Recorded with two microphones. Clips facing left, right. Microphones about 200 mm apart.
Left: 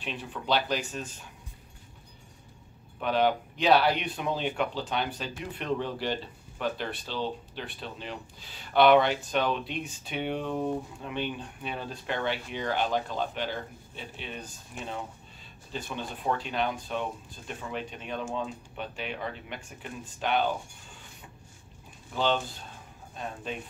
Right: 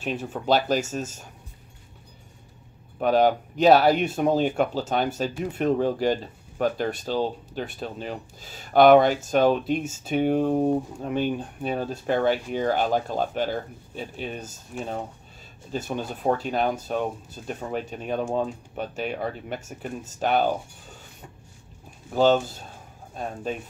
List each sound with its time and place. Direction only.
0.0 s speech: 45° right (ahead or behind)
3.0 s speech: 40° right (ahead or behind)
22.1 s speech: 45° right (ahead or behind)